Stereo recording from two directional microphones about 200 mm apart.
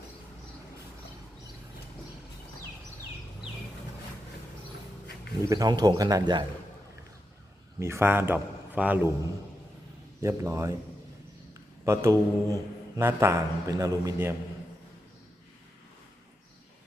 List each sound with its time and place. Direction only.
5.5 s speech: 20° right (ahead or behind)
7.8 s a man's voice: 15° right (ahead or behind)
10.2 s a man's voice: 15° right (ahead or behind)
11.9 s a man's voice: 15° right (ahead or behind)